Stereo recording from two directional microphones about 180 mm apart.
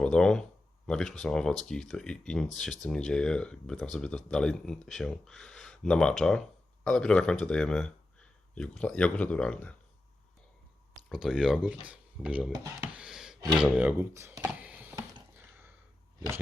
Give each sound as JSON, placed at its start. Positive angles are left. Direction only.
{"t": 0.0, "sound": "a man's voice", "side_deg": 5}
{"t": 11.1, "sound": "speech", "side_deg": -5}
{"t": 13.0, "sound": "a sound", "side_deg": -5}
{"t": 13.7, "sound": "speech", "side_deg": -10}